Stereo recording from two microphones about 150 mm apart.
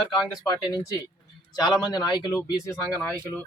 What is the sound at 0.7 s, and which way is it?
Speech, 25° left (ahead or behind).